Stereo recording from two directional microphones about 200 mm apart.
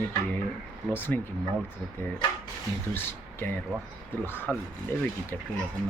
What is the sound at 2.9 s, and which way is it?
Speech, 10° left (ahead or behind).